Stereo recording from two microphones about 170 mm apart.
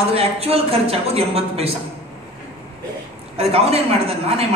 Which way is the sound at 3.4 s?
35° right (ahead or behind).